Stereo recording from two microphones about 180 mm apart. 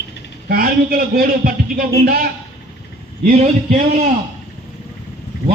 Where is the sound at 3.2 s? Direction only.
40° right (ahead or behind).